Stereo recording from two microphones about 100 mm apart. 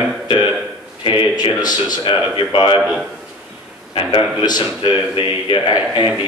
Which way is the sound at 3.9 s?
50° left (ahead or behind).